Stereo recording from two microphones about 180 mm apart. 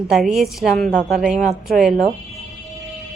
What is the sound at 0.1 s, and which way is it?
Speech, centre (ahead or behind).